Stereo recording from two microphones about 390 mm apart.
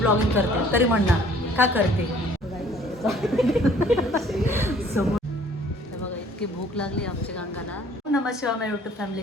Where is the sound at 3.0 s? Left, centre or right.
Centre.